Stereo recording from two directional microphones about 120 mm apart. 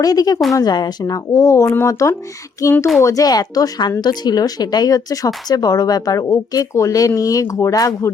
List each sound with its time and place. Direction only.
0.0 s speech: 30° left (ahead or behind)